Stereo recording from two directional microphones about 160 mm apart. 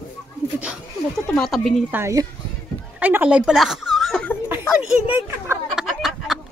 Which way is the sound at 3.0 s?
10° right (ahead or behind).